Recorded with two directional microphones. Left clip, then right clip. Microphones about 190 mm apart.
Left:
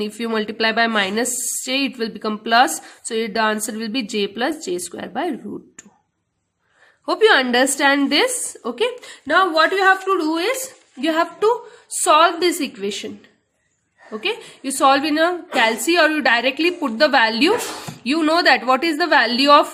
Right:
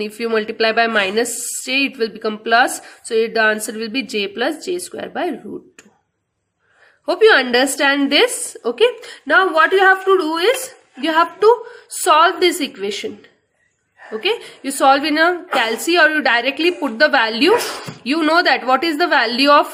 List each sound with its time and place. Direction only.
0.0 s a woman's voice: 25° left (ahead or behind)
7.0 s a woman's voice: 25° left (ahead or behind)
14.2 s a woman's voice: 20° left (ahead or behind)